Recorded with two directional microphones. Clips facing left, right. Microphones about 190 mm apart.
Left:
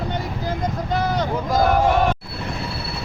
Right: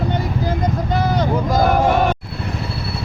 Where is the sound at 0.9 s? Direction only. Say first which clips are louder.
Right 2 dB; 5° right (ahead or behind).